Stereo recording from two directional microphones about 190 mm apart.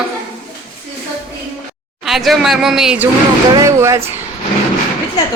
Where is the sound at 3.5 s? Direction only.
15° right (ahead or behind).